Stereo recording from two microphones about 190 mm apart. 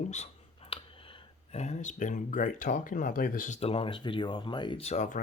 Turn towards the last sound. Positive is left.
turn(degrees=40)  # may be behind; listen again after turning